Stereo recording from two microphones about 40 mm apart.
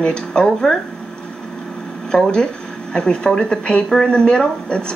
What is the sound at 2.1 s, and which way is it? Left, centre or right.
Speech, centre.